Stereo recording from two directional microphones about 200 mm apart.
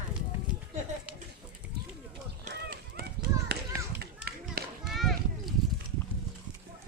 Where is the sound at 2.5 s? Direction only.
50° right (ahead or behind).